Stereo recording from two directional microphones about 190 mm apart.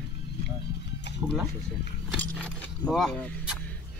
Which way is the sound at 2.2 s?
5° left (ahead or behind).